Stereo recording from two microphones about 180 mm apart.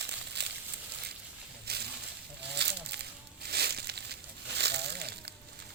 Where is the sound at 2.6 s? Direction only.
70° right (ahead or behind).